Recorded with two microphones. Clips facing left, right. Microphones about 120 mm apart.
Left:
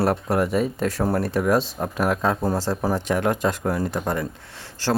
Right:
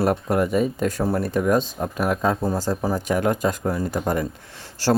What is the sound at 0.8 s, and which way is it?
Speech, 40° left (ahead or behind).